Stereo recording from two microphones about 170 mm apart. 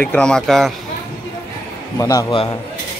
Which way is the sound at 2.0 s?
20° left (ahead or behind).